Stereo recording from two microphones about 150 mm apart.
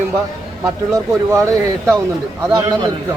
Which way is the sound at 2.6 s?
25° right (ahead or behind).